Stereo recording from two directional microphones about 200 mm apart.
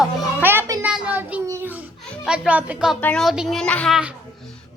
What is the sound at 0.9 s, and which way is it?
Child singing, 5° right (ahead or behind).